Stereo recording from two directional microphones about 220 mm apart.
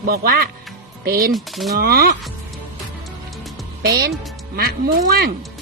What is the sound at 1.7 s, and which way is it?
Speech, 45° right (ahead or behind).